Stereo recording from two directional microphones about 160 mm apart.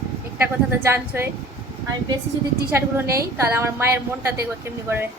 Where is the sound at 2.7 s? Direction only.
15° right (ahead or behind).